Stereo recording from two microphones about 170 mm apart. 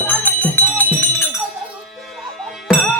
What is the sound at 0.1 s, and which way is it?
Music, 10° left (ahead or behind).